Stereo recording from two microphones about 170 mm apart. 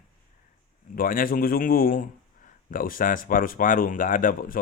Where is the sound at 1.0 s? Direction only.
55° left (ahead or behind).